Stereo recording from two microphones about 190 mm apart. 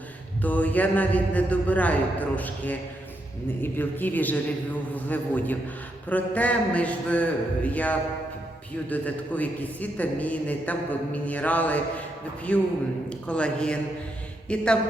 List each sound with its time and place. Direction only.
0.4 s a man's voice: 10° left (ahead or behind)